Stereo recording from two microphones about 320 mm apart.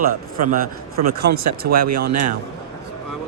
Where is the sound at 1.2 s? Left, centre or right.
Right.